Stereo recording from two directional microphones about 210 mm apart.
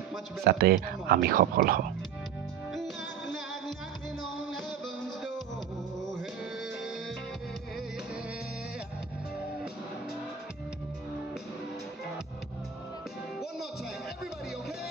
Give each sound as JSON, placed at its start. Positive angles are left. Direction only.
{"t": 0.4, "sound": "speech", "side_deg": -50}
{"t": 2.7, "sound": "music", "side_deg": 0}